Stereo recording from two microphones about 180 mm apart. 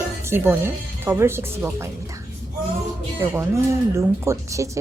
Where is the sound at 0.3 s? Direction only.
15° right (ahead or behind).